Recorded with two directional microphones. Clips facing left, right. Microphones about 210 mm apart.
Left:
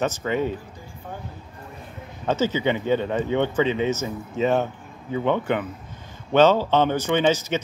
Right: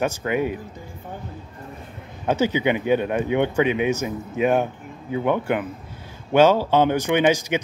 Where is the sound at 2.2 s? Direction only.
15° right (ahead or behind).